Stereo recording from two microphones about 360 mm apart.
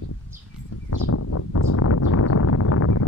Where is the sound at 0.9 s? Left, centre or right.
Left.